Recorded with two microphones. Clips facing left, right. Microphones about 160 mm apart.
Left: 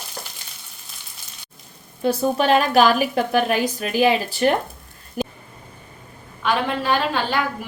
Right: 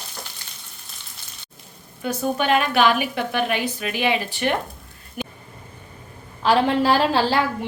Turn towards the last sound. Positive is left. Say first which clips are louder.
# right 3 dB
turn(degrees=-30)  # may be behind; listen again after turning